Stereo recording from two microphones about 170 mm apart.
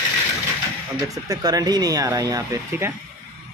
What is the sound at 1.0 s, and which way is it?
Speech, 20° right (ahead or behind).